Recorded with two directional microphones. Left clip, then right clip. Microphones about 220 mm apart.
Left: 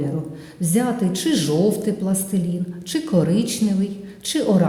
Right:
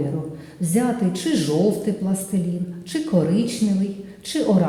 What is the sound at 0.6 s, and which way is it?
Speech, 25° left (ahead or behind).